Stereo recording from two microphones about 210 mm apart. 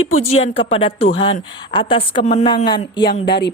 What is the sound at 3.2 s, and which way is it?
Speech, 50° left (ahead or behind).